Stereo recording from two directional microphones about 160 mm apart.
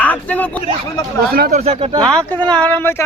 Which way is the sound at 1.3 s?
70° right (ahead or behind).